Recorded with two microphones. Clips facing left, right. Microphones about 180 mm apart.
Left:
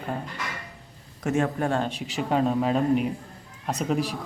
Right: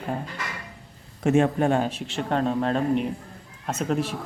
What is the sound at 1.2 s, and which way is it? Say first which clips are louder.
Speech: right 5 dB; 25° right (ahead or behind).